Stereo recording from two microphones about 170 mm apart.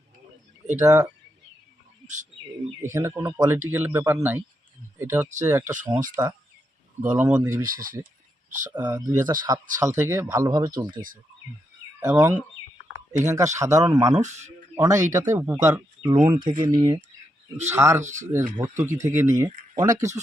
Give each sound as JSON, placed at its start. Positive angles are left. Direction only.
{"t": 0.8, "sound": "speech", "side_deg": -20}
{"t": 2.8, "sound": "speech", "side_deg": -15}
{"t": 6.2, "sound": "speech", "side_deg": -25}
{"t": 7.0, "sound": "speech", "side_deg": -10}
{"t": 7.6, "sound": "speech", "side_deg": -55}
{"t": 9.0, "sound": "speech", "side_deg": -25}
{"t": 11.9, "sound": "speech", "side_deg": -15}
{"t": 14.2, "sound": "speech", "side_deg": -45}
{"t": 14.8, "sound": "speech", "side_deg": -20}
{"t": 16.2, "sound": "speech", "side_deg": -30}
{"t": 17.7, "sound": "speech", "side_deg": -15}
{"t": 18.0, "sound": "speech", "side_deg": -45}
{"t": 18.3, "sound": "speech", "side_deg": -15}